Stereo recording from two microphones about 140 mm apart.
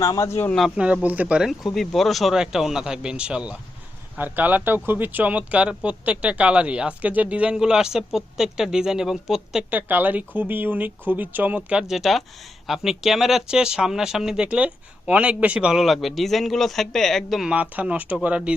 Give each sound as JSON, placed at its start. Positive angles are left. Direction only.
{"t": 0.0, "sound": "a man's voice", "side_deg": 20}
{"t": 0.5, "sound": "speech", "side_deg": -5}